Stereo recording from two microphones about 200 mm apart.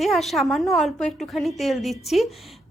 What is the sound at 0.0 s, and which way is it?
A woman's voice, centre (ahead or behind).